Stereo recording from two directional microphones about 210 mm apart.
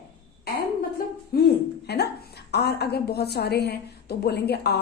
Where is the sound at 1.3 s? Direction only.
45° left (ahead or behind).